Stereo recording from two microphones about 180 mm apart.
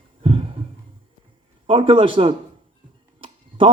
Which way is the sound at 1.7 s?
30° right (ahead or behind).